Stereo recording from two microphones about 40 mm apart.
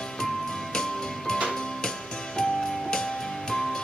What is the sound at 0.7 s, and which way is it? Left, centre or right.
Music, centre.